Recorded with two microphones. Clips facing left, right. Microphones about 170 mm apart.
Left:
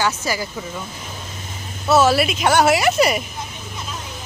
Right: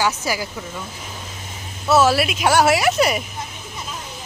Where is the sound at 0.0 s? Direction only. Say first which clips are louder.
Even; 10° right (ahead or behind).